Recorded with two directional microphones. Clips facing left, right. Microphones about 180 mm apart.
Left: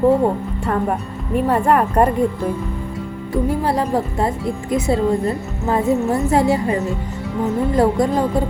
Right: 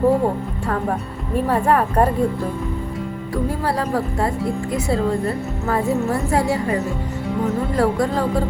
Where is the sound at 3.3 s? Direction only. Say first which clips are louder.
Left 4 dB; 20° left (ahead or behind).